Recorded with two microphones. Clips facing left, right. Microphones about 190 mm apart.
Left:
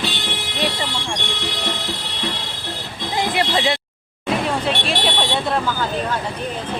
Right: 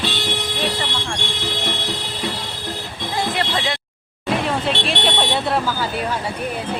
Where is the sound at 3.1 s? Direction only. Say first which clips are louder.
Left 2 dB; 15° left (ahead or behind).